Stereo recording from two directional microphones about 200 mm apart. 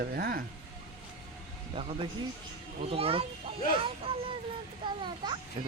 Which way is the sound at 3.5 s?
25° right (ahead or behind).